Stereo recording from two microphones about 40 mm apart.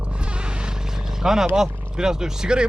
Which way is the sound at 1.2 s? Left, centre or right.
Centre.